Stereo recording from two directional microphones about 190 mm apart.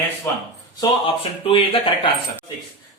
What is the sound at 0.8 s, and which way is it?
Speech, 30° left (ahead or behind).